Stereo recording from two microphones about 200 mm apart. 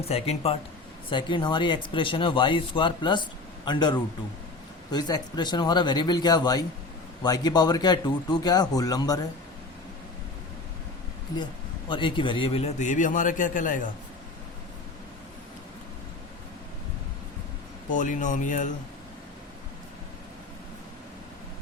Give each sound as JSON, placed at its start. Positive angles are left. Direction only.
{"t": 0.0, "sound": "a man's voice", "side_deg": 30}
{"t": 11.9, "sound": "a man's voice", "side_deg": 25}
{"t": 17.9, "sound": "a man's voice", "side_deg": 40}